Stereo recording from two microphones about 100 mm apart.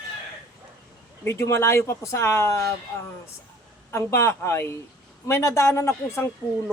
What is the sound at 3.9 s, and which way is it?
Speech, 25° left (ahead or behind).